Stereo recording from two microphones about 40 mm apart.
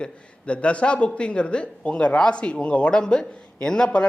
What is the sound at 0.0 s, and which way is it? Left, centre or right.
Speech, left.